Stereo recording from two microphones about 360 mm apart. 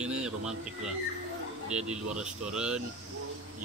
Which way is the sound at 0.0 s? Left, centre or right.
Centre.